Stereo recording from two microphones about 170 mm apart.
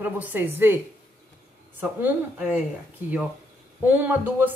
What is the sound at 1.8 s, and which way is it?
A woman's voice, 10° right (ahead or behind).